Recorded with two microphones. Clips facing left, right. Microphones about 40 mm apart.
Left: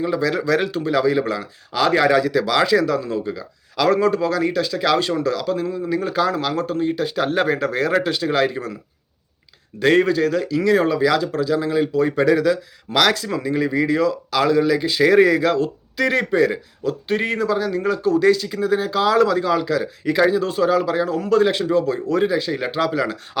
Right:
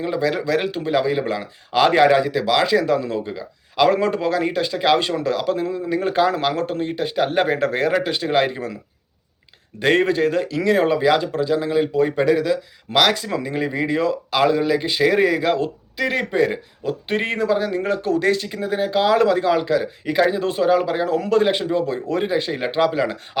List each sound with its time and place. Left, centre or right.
0.0 s speech: right
0.3 s a man's voice: centre
2.8 s speech: right
7.6 s speech: right
7.9 s a man's voice: centre
8.1 s speech: right
9.8 s speech: right
15.0 s a man's voice: centre
16.0 s a man's voice: centre
16.3 s speech: right